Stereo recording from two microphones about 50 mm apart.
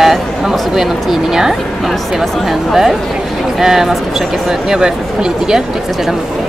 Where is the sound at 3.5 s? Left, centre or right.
Centre.